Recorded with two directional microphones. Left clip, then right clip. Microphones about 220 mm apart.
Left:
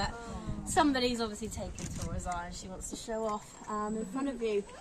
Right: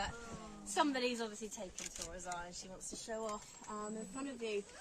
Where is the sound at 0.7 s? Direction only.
25° left (ahead or behind).